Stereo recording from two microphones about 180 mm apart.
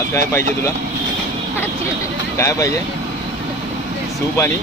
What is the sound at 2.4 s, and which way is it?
Speech, 15° left (ahead or behind).